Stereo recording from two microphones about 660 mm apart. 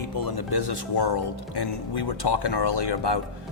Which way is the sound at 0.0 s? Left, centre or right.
Left.